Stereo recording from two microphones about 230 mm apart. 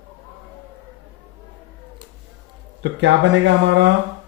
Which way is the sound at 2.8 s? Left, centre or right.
Right.